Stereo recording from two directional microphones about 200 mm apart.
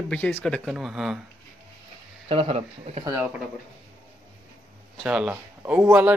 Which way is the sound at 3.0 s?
10° right (ahead or behind).